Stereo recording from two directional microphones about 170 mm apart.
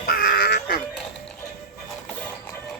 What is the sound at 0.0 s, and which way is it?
Crow, 60° left (ahead or behind).